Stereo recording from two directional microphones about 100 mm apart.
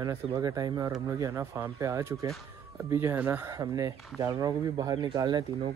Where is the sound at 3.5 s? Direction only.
35° right (ahead or behind).